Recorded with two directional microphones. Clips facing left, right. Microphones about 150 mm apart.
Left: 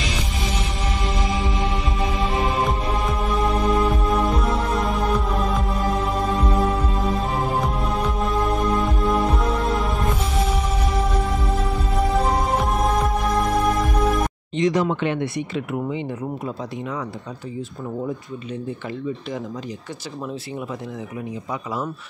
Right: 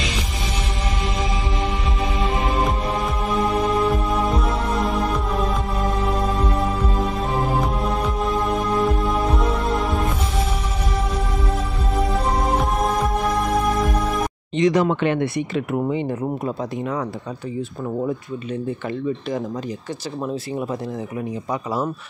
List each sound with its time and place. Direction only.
2.1 s music: centre (ahead or behind)
14.6 s speech: 70° right (ahead or behind); by 17.0 s 45° right (ahead or behind)